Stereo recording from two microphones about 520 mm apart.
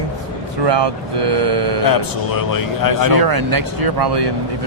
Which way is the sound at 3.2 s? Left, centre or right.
Right.